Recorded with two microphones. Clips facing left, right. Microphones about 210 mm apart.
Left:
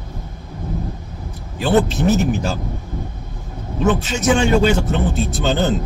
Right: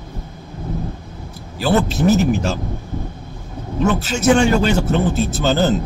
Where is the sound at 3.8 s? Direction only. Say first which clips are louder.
Right 1 dB; centre (ahead or behind).